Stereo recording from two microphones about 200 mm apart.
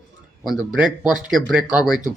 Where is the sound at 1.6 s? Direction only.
20° left (ahead or behind).